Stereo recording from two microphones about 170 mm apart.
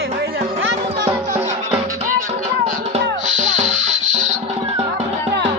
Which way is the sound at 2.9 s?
45° right (ahead or behind).